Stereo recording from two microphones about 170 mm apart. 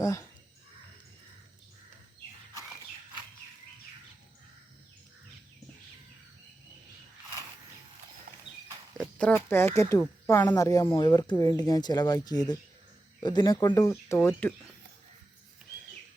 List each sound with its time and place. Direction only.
0.0 s speech: 20° left (ahead or behind)
8.3 s clip-clop: 55° right (ahead or behind)
9.0 s speech: 5° left (ahead or behind)